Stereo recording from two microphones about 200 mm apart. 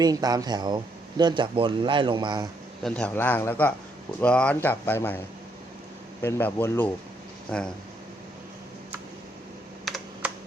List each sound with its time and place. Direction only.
0.0 s speech: 20° right (ahead or behind)
2.8 s speech: 5° left (ahead or behind)
6.2 s speech: 10° left (ahead or behind)
9.8 s computer keyboard: centre (ahead or behind)